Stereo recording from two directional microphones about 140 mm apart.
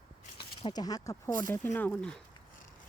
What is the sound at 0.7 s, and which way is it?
Speech, 30° left (ahead or behind).